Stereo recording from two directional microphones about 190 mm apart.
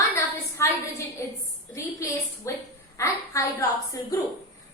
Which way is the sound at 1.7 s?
15° left (ahead or behind).